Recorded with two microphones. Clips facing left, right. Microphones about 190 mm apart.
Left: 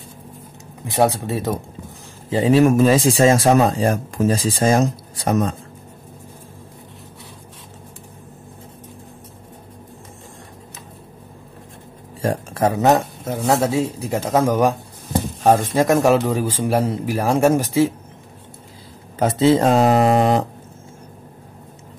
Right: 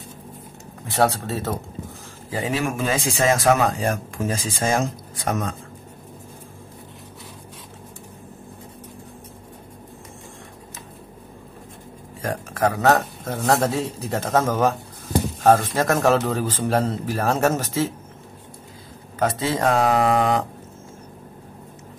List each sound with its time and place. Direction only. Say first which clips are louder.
0.8 s speech: left 3 dB; 15° left (ahead or behind)
2.2 s a man's voice: left 10 dB; 25° left (ahead or behind)
2.6 s speech: left 10 dB; 40° left (ahead or behind)
12.2 s speech: left 3 dB; 30° left (ahead or behind); by 17.9 s 10° left (ahead or behind)
19.1 s speech: left 8 dB; 25° left (ahead or behind)